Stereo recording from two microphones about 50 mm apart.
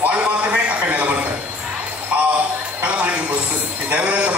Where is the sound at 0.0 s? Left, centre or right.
Right.